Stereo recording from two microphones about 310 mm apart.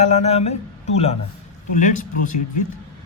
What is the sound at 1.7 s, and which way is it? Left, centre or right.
Speech, left.